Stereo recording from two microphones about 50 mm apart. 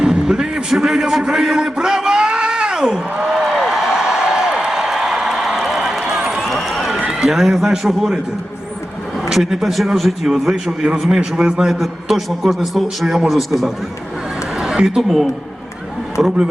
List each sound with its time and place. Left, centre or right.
0.0 s a sound: centre
7.1 s a man's voice: centre
9.3 s a man's voice: centre
10.5 s a man's voice: centre
14.6 s a sound: centre
15.0 s a man's voice: centre
16.1 s a man's voice: centre